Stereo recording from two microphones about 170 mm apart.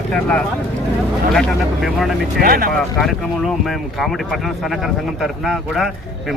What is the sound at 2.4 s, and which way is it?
Speech, 60° right (ahead or behind).